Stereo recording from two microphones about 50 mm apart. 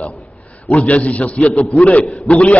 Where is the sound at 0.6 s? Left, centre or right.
Left.